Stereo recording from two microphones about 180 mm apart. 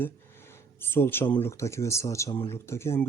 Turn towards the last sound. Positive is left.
turn(degrees=15)  # may be behind; listen again after turning